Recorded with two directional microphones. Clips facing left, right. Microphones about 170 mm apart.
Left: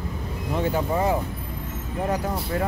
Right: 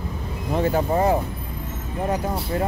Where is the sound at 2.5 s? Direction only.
25° right (ahead or behind).